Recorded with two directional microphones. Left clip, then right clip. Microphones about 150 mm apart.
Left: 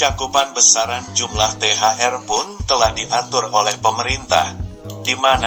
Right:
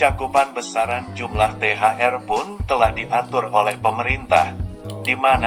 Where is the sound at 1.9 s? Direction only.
30° left (ahead or behind).